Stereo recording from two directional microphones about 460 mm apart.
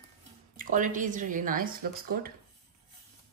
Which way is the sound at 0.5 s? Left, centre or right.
Centre.